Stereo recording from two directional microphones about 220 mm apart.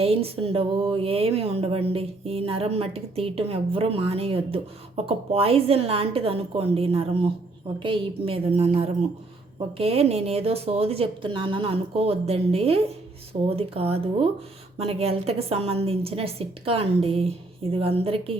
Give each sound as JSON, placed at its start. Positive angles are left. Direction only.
{"t": 0.0, "sound": "speech", "side_deg": -25}